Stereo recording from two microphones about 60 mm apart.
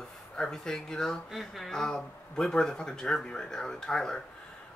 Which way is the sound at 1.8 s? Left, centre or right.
Centre.